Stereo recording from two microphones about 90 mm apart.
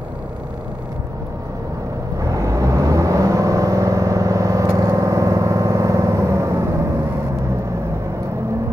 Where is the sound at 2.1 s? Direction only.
40° right (ahead or behind).